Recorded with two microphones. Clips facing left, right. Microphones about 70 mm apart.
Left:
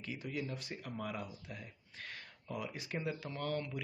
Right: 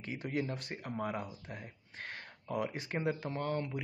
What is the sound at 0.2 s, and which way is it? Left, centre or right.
Speech, right.